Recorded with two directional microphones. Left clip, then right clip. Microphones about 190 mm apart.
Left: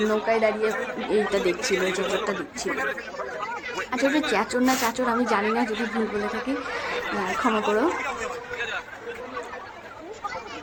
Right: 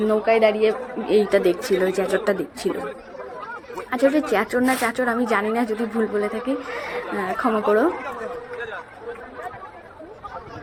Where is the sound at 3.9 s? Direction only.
10° right (ahead or behind).